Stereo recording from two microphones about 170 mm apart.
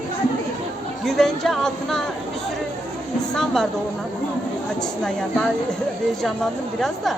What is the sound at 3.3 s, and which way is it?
Speech, 5° left (ahead or behind).